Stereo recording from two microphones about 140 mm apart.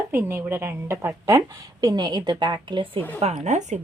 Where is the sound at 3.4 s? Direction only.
55° right (ahead or behind).